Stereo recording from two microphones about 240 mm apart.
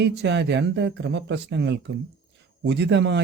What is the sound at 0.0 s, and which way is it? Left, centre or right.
Speech, right.